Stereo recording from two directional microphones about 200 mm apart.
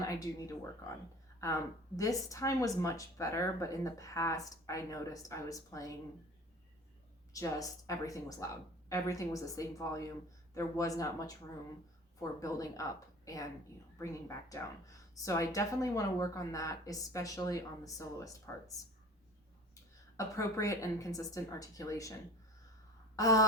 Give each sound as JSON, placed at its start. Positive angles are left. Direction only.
{"t": 0.0, "sound": "speech", "side_deg": 15}
{"t": 2.0, "sound": "a woman's voice", "side_deg": 15}
{"t": 7.3, "sound": "a woman's voice", "side_deg": 15}
{"t": 20.1, "sound": "a woman's voice", "side_deg": 15}
{"t": 23.1, "sound": "a sound", "side_deg": 15}